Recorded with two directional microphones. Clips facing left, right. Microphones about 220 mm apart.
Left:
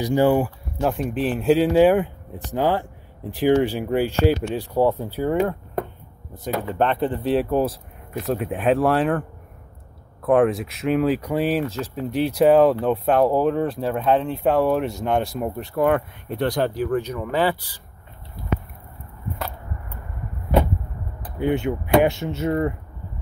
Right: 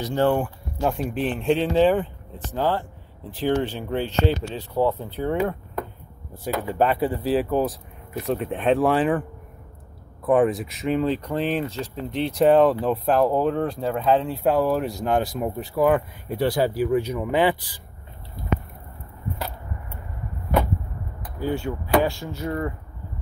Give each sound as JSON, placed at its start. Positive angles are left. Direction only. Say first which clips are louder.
{"t": 0.0, "sound": "speech", "louder": "left 3 dB", "side_deg": 10}
{"t": 6.4, "sound": "speech", "louder": "even", "side_deg": -10}
{"t": 10.2, "sound": "speech", "louder": "left 1 dB", "side_deg": 0}
{"t": 21.4, "sound": "speech", "louder": "left 4 dB", "side_deg": 20}